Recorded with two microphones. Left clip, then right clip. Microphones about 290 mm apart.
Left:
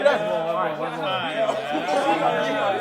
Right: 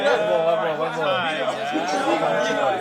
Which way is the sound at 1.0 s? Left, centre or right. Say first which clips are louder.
Right 3 dB; centre.